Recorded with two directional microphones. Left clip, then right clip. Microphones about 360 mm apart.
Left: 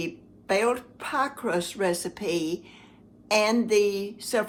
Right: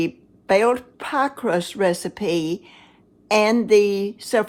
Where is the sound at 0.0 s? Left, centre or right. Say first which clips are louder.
Right 9 dB; right.